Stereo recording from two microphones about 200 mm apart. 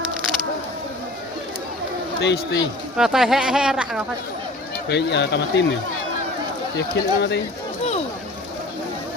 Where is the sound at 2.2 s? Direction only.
60° left (ahead or behind).